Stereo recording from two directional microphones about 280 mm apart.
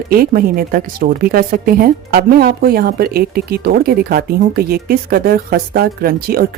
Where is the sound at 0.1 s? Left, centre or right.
Right.